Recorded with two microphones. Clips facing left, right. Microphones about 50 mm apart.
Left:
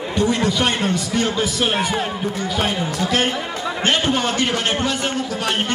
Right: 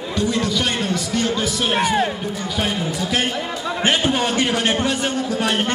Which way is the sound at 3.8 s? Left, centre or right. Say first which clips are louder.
Even; centre.